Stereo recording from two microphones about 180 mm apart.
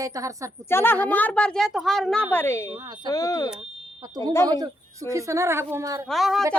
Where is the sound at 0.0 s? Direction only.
20° right (ahead or behind).